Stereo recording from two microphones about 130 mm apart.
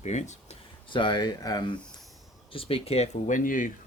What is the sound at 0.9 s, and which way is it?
Speech, 40° left (ahead or behind).